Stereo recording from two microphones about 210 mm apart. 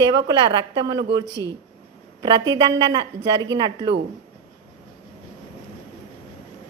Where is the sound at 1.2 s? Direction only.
15° left (ahead or behind).